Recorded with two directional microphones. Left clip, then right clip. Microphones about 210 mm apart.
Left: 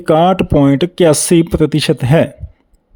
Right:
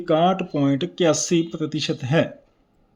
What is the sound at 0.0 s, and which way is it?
Speech, 45° left (ahead or behind).